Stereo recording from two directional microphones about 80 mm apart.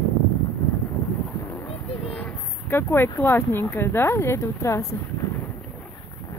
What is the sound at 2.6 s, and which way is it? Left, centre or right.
Speech, left.